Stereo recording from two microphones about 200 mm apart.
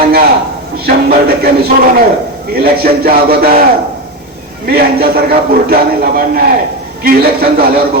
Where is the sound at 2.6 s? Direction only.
50° right (ahead or behind).